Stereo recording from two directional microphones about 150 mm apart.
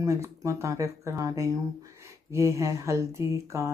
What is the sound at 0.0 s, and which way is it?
Speech, 20° right (ahead or behind).